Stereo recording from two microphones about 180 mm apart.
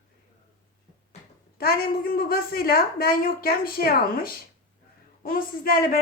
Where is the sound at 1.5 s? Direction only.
55° left (ahead or behind).